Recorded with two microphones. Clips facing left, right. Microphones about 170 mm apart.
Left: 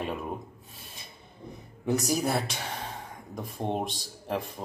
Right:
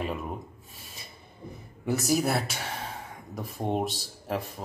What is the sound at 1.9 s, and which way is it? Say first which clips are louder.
Speech: right 1 dB; 5° right (ahead or behind).